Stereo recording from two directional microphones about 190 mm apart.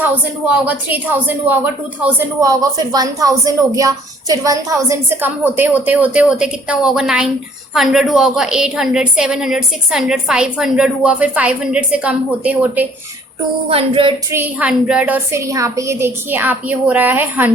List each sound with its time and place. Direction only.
0.0 s a woman's voice: 5° right (ahead or behind)
13.7 s a sound: 30° right (ahead or behind)
14.3 s speech: 10° right (ahead or behind)